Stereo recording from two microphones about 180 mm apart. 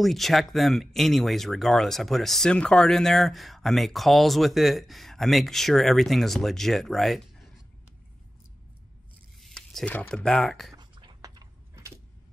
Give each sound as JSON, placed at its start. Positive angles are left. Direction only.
{"t": 0.0, "sound": "speech", "side_deg": 0}
{"t": 9.4, "sound": "speech", "side_deg": 0}
{"t": 10.8, "sound": "a sound", "side_deg": -25}